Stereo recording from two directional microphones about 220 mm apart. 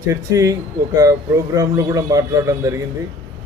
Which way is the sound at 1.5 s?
15° right (ahead or behind).